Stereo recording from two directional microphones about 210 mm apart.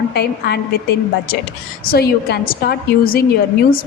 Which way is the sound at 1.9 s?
45° left (ahead or behind).